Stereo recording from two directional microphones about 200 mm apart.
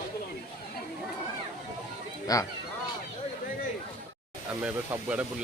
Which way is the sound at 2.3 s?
20° left (ahead or behind).